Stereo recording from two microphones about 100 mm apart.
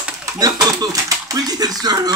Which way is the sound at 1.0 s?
40° right (ahead or behind).